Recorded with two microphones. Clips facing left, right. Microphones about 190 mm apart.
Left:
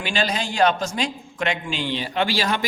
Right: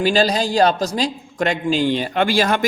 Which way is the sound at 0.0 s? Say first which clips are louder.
Right 8 dB; 35° right (ahead or behind).